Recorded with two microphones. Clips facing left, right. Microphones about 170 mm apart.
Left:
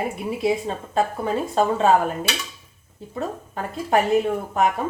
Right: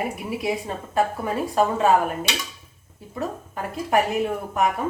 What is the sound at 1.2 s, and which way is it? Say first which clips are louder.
Speech: left 1 dB; 25° left (ahead or behind).